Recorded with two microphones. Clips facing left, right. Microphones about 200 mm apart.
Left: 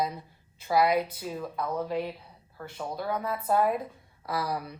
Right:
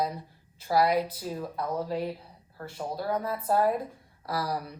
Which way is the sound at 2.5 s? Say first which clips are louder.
Right 1 dB; 10° right (ahead or behind).